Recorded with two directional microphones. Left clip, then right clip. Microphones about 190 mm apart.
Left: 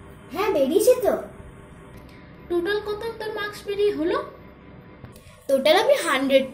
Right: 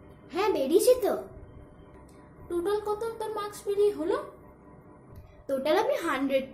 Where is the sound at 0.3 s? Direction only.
15° right (ahead or behind).